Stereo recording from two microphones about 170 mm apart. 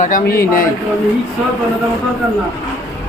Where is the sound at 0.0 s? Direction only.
50° left (ahead or behind).